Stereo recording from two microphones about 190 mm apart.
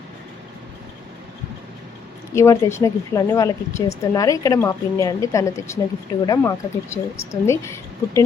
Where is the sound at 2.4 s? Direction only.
15° left (ahead or behind).